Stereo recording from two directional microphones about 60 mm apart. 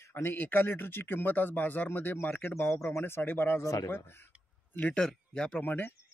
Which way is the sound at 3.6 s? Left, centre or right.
Left.